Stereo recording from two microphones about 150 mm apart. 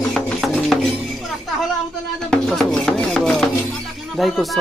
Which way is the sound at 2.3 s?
Centre (ahead or behind).